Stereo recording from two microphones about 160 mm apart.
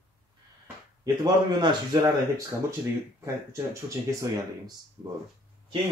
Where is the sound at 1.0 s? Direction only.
25° right (ahead or behind).